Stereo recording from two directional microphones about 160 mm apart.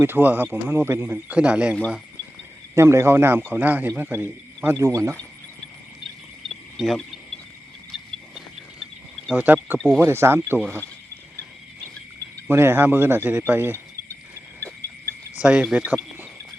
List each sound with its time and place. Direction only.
0.0 s a man's voice: 15° right (ahead or behind)
2.7 s a man's voice: 15° right (ahead or behind)
6.7 s speech: centre (ahead or behind)
9.3 s a man's voice: 10° right (ahead or behind)
9.7 s speech: 5° left (ahead or behind)
10.0 s a man's voice: 15° right (ahead or behind)
12.5 s a man's voice: 15° right (ahead or behind)
15.4 s a man's voice: 5° right (ahead or behind)